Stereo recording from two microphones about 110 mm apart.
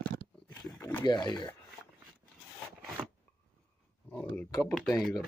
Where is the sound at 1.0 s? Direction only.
40° left (ahead or behind).